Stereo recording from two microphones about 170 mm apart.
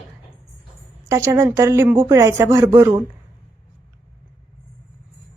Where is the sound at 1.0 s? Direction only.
15° right (ahead or behind).